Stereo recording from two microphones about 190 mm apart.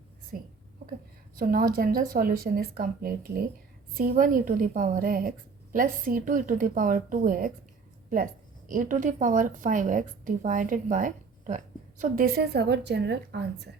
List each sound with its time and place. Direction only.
0.3 s a woman's voice: 50° right (ahead or behind)